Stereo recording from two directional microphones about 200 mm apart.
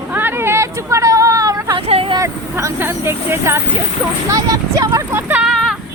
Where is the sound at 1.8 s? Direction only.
30° right (ahead or behind).